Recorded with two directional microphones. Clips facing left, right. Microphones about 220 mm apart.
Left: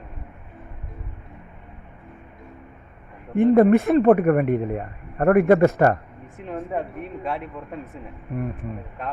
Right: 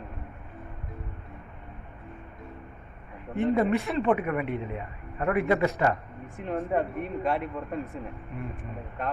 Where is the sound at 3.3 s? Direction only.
50° left (ahead or behind).